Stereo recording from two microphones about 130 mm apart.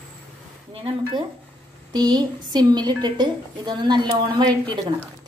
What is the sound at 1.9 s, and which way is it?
A woman's voice, 30° right (ahead or behind).